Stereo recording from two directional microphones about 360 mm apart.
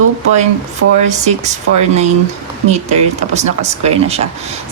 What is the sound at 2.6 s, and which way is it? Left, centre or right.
Speech, centre.